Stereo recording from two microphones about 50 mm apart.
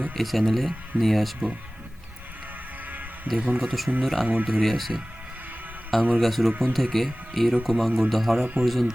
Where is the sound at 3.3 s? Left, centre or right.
Right.